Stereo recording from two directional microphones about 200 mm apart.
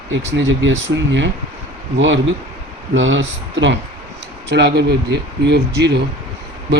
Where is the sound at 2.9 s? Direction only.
70° right (ahead or behind).